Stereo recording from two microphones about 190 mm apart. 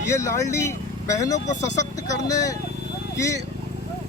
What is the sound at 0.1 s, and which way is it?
Speech, 15° left (ahead or behind).